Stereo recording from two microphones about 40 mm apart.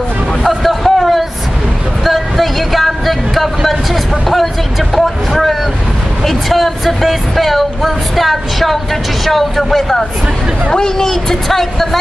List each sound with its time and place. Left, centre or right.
0.4 s a sound: centre
4.9 s vehicle: centre
6.2 s speech: centre